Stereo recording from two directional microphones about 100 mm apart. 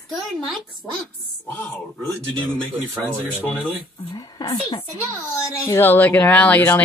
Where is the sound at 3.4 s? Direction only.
15° left (ahead or behind).